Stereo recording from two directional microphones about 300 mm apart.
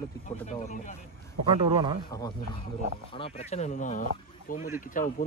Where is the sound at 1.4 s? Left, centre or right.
Centre.